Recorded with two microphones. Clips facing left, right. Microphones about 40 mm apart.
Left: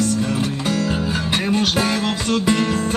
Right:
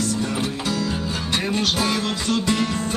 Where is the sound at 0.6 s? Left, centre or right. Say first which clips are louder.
Left 4 dB; centre.